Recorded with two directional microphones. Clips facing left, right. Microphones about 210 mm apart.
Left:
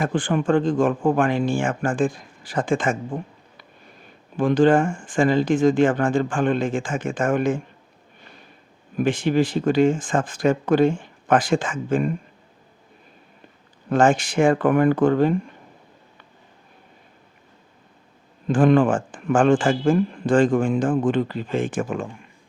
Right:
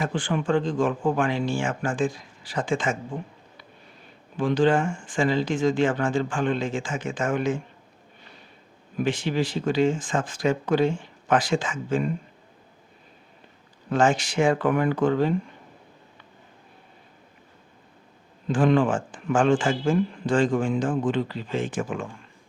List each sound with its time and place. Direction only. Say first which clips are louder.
0.0 s a man's voice: left 4 dB; 50° left (ahead or behind)
4.4 s a man's voice: left 4 dB; 50° left (ahead or behind)
9.0 s a man's voice: left 5 dB; 50° left (ahead or behind)
13.9 s a man's voice: left 4 dB; 50° left (ahead or behind)
18.4 s a man's voice: left 4 dB; 50° left (ahead or behind)